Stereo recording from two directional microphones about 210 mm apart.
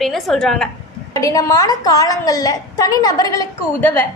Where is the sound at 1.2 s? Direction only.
15° left (ahead or behind).